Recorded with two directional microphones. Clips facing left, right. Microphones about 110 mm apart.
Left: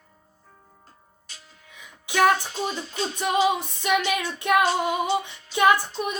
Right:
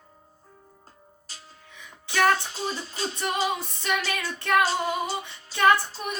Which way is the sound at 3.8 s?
15° left (ahead or behind).